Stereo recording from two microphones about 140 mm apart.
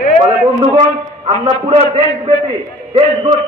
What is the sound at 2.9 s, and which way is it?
Speech, 35° right (ahead or behind).